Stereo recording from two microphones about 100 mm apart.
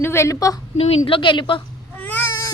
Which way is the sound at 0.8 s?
90° left.